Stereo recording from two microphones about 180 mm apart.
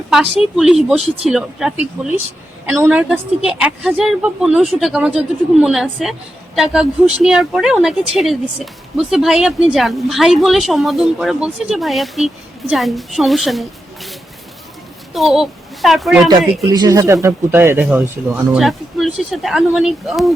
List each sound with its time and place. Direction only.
0.5 s a woman's voice: centre (ahead or behind)
16.7 s speech: 20° right (ahead or behind); by 20.3 s centre (ahead or behind)